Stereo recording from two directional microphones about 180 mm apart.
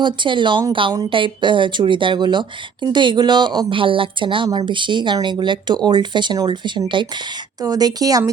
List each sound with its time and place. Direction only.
0.0 s speech: 25° right (ahead or behind)